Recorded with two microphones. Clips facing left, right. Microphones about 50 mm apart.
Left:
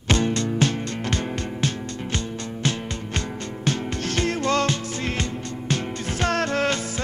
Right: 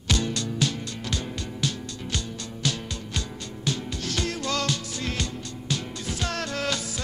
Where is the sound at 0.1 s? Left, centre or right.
Left.